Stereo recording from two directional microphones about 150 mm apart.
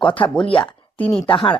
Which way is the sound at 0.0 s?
35° left (ahead or behind).